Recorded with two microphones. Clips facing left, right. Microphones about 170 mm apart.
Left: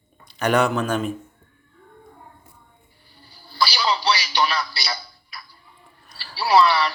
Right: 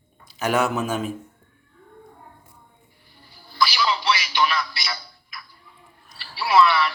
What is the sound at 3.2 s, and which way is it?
Music, 30° left (ahead or behind).